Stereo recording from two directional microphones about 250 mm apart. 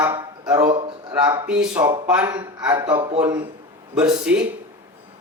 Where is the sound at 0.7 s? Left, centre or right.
Centre.